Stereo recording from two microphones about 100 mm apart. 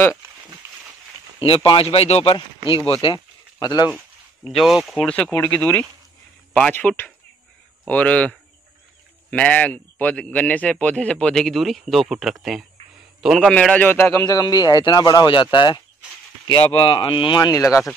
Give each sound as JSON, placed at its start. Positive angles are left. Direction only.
{"t": 0.6, "sound": "a sound", "side_deg": -30}
{"t": 1.6, "sound": "speech", "side_deg": 60}
{"t": 2.9, "sound": "speech", "side_deg": 65}
{"t": 3.5, "sound": "speech", "side_deg": 45}
{"t": 4.5, "sound": "speech", "side_deg": 0}
{"t": 5.0, "sound": "a man's voice", "side_deg": 10}
{"t": 13.5, "sound": "speech", "side_deg": 10}
{"t": 14.2, "sound": "speech", "side_deg": 40}
{"t": 17.4, "sound": "speech", "side_deg": 35}